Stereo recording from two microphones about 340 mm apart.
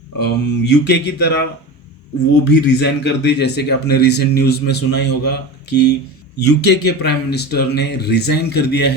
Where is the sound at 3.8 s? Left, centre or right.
Left.